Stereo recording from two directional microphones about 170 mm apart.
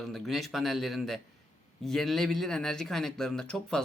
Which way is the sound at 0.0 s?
Centre (ahead or behind).